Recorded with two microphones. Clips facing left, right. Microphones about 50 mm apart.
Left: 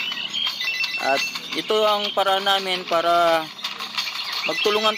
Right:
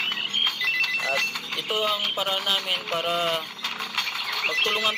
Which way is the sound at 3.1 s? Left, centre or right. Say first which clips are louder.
Left 9 dB; left.